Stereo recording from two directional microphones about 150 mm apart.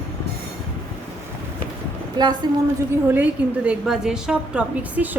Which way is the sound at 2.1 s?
30° right (ahead or behind).